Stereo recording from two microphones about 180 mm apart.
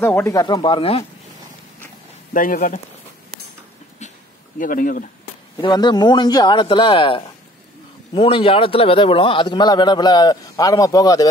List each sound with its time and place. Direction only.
0.0 s a man's voice: 10° left (ahead or behind); by 1.0 s 30° left (ahead or behind)
2.3 s speech: 50° left (ahead or behind)
4.6 s speech: 50° left (ahead or behind)
5.6 s a man's voice: 25° left (ahead or behind)